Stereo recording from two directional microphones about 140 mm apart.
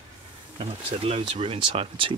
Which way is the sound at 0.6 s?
45° right (ahead or behind).